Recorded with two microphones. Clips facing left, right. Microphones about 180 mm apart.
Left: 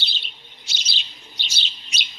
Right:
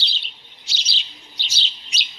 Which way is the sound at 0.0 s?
50° left (ahead or behind).